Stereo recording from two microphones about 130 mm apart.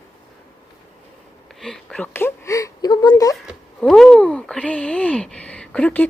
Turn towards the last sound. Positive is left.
turn(degrees=10)  # may be behind; listen again after turning